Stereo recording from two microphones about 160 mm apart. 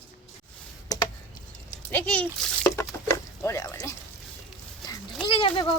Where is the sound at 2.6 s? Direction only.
15° left (ahead or behind).